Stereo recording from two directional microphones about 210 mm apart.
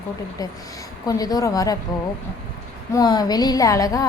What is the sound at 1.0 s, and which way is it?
Speech, 15° left (ahead or behind).